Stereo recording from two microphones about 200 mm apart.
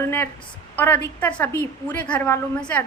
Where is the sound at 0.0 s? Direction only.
10° left (ahead or behind).